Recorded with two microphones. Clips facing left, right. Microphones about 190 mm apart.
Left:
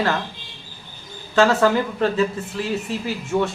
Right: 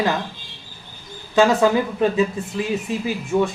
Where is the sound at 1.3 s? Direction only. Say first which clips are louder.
Right 1 dB; 15° right (ahead or behind).